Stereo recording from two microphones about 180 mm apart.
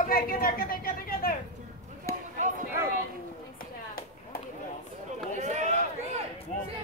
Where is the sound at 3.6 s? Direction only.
55° left (ahead or behind).